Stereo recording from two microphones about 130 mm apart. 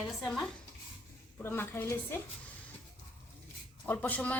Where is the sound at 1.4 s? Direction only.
15° left (ahead or behind).